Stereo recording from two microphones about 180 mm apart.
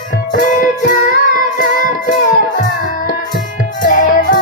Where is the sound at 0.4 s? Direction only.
45° left (ahead or behind).